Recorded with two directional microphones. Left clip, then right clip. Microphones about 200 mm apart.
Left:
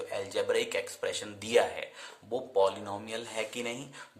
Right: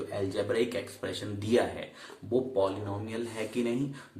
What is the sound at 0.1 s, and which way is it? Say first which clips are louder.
A man's voice: left 1 dB; 50° left (ahead or behind).